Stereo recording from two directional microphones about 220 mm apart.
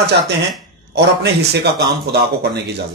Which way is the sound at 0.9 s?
50° right (ahead or behind).